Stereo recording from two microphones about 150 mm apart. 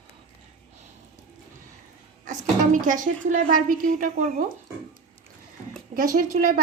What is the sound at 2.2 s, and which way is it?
A woman's voice, 60° right (ahead or behind).